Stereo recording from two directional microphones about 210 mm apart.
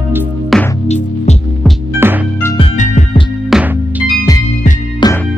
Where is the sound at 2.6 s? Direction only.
35° left (ahead or behind).